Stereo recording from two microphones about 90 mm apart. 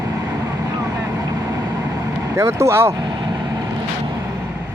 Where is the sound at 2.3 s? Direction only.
30° right (ahead or behind).